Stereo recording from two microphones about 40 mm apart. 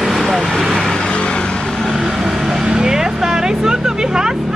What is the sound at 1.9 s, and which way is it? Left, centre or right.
Vehicle, centre.